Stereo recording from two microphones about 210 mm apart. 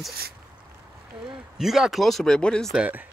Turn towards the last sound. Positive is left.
turn(degrees=-5)  # may be behind; listen again after turning